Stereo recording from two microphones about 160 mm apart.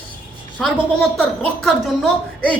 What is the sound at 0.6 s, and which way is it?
Speech, centre (ahead or behind).